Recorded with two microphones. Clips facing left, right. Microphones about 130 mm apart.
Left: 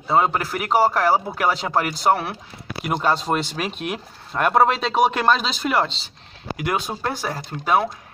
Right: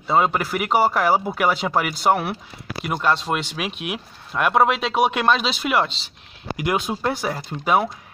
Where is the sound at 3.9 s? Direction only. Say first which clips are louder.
Left 1 dB; 5° right (ahead or behind).